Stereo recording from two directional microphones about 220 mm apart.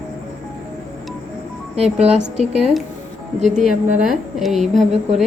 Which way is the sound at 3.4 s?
30° right (ahead or behind).